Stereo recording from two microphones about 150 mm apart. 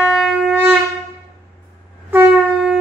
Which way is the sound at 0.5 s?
10° right (ahead or behind).